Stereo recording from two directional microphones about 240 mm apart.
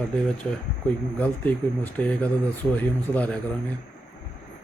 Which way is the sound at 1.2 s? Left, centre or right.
Centre.